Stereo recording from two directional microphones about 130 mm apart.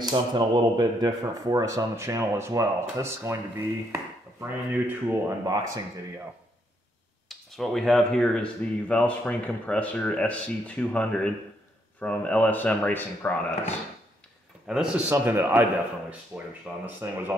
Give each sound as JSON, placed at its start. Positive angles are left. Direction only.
{"t": 0.0, "sound": "speech", "side_deg": -35}
{"t": 5.4, "sound": "speech", "side_deg": -30}
{"t": 7.2, "sound": "speech", "side_deg": 0}
{"t": 14.7, "sound": "speech", "side_deg": -5}
{"t": 15.0, "sound": "speech", "side_deg": -15}